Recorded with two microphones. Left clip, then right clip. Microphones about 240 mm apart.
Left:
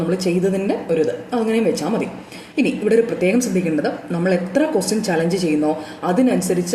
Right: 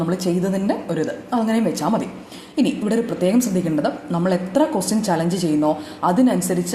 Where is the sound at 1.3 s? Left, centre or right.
Right.